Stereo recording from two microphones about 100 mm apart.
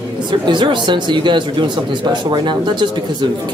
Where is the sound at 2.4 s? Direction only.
50° right (ahead or behind).